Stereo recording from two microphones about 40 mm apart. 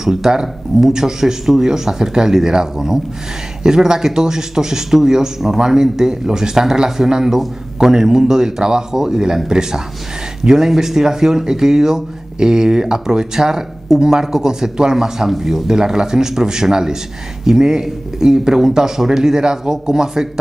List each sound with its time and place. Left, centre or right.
0.0 s speech: centre